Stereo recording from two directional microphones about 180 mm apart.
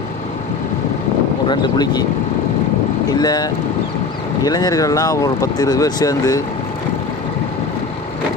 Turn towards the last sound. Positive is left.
turn(degrees=20)  # may be behind; listen again after turning